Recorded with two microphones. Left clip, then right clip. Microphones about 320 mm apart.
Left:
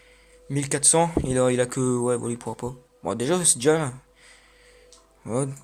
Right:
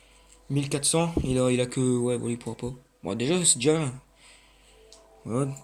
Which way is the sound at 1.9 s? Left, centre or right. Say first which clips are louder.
Left 3 dB; left.